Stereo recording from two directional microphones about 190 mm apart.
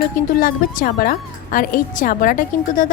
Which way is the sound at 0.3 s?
50° left (ahead or behind).